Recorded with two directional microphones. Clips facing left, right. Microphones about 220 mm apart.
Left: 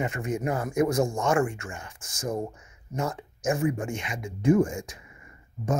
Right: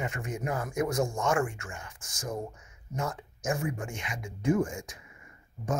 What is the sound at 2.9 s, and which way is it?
Speech, 25° left (ahead or behind).